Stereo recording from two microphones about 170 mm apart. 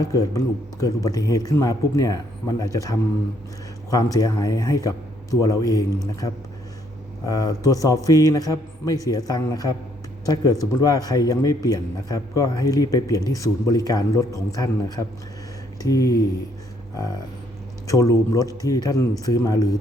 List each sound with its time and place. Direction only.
0.0 s a man's voice: 20° left (ahead or behind)
17.8 s a man's voice: 20° left (ahead or behind)